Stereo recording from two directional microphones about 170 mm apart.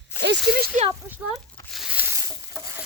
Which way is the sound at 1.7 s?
5° right (ahead or behind).